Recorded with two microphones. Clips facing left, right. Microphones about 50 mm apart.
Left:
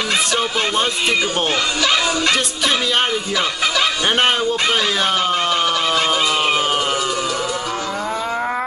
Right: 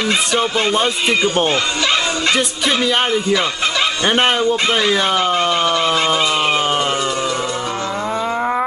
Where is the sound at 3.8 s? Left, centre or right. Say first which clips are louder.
Right 2 dB; centre.